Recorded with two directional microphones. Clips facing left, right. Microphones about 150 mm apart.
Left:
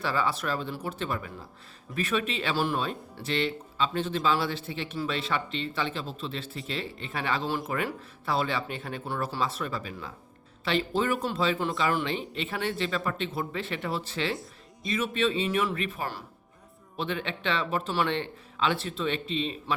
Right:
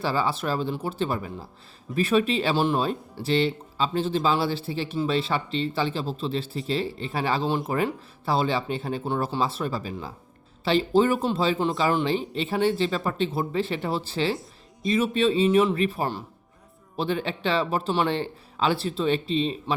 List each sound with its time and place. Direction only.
0.0 s speech: 30° right (ahead or behind)